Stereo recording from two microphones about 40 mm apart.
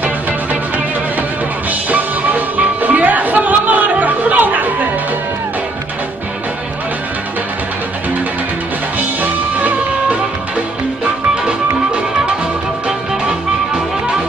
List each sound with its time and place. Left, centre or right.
1.7 s music: right
9.2 s music: right